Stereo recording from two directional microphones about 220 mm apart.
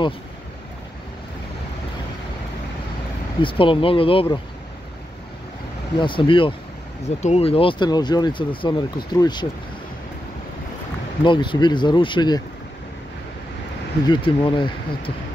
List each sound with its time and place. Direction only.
3.3 s speech: 25° left (ahead or behind)
5.9 s speech: 20° left (ahead or behind)
11.2 s speech: 20° left (ahead or behind)
14.0 s speech: 20° left (ahead or behind)